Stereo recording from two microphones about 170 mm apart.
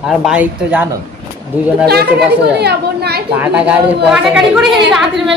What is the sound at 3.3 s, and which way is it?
A woman's voice, 10° right (ahead or behind).